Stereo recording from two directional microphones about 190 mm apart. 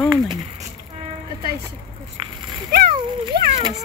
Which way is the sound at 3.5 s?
20° right (ahead or behind).